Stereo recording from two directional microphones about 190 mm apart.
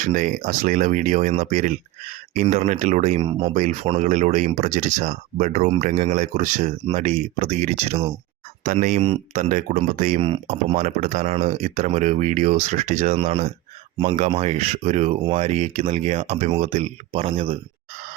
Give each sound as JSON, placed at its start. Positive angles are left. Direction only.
{"t": 0.0, "sound": "speech", "side_deg": -45}
{"t": 3.5, "sound": "speech", "side_deg": -40}
{"t": 8.6, "sound": "speech", "side_deg": -45}
{"t": 10.2, "sound": "speech", "side_deg": -35}